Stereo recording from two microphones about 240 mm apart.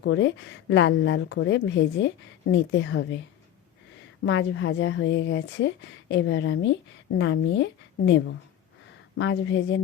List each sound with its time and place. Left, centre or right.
0.0 s a woman's voice: left
4.3 s a woman's voice: left